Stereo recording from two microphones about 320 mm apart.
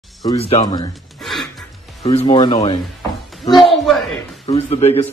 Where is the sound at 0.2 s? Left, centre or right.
Centre.